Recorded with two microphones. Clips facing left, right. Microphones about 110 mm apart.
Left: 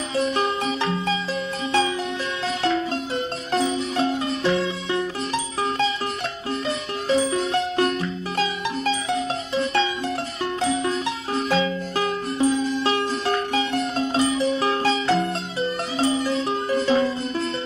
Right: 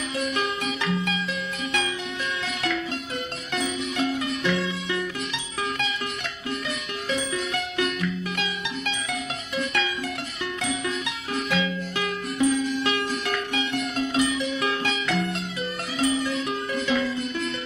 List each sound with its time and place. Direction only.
0.1 s music: 30° left (ahead or behind)
3.5 s music: 35° left (ahead or behind)
7.1 s music: 35° left (ahead or behind)